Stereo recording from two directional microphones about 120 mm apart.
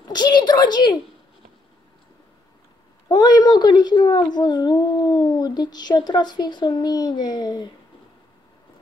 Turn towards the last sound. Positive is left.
turn(degrees=35)  # may be behind; listen again after turning